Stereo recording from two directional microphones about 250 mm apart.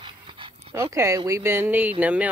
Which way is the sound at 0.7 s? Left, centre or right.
Centre.